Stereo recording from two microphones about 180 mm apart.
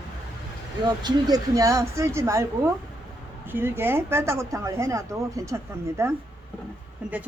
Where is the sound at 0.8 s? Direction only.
25° right (ahead or behind).